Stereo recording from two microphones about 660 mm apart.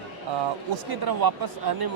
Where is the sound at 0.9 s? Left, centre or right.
Right.